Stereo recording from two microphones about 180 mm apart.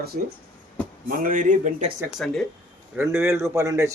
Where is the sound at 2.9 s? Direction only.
15° right (ahead or behind).